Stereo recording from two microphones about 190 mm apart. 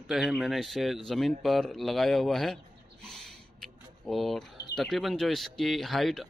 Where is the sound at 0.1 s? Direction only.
Centre (ahead or behind).